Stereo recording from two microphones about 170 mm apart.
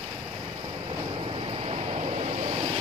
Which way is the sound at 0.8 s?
30° right (ahead or behind).